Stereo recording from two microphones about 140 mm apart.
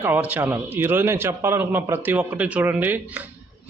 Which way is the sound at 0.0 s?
10° right (ahead or behind).